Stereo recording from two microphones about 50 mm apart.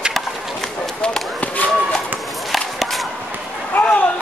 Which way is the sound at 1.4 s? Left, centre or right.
Left.